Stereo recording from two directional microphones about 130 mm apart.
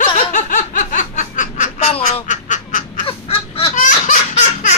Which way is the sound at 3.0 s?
45° left (ahead or behind).